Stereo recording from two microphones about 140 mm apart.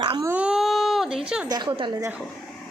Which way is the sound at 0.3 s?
5° right (ahead or behind).